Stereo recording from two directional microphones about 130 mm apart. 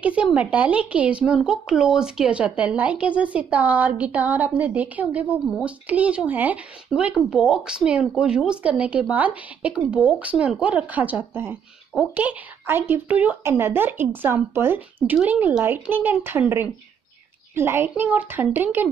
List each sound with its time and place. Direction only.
0.0 s speech: 10° right (ahead or behind)